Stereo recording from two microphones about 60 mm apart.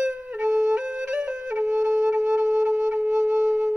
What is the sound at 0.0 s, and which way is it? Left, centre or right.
Flute, centre.